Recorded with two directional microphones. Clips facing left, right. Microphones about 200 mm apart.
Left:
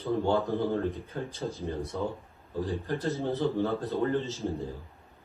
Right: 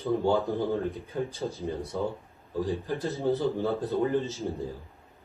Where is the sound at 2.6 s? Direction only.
15° right (ahead or behind).